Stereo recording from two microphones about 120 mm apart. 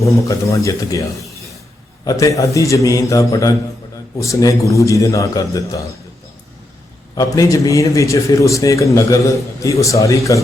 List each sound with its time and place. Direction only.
0.0 s a man's voice: 25° left (ahead or behind)
2.0 s a man's voice: 30° left (ahead or behind)
7.2 s a man's voice: 30° left (ahead or behind)